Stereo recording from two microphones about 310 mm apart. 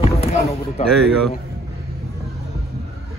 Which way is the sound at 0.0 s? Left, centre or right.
Centre.